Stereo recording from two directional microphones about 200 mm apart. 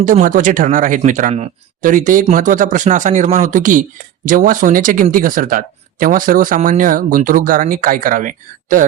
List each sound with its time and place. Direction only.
0.0 s speech: 40° right (ahead or behind)